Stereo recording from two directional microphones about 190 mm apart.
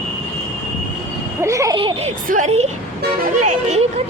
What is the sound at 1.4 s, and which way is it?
Speech, 15° right (ahead or behind).